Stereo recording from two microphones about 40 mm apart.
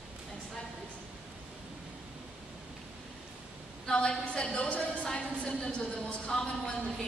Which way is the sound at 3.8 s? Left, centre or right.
Left.